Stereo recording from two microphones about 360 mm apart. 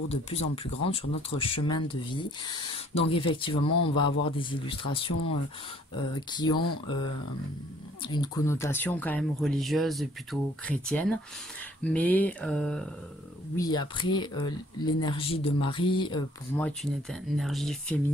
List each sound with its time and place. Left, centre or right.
0.1 s speech: centre
3.6 s speech: left
3.9 s speech: centre
6.1 s speech: centre
8.0 s speech: centre